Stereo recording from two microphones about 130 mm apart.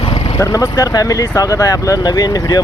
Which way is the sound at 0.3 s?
25° left (ahead or behind).